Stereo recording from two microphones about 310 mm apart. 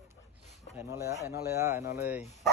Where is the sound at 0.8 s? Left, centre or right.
Centre.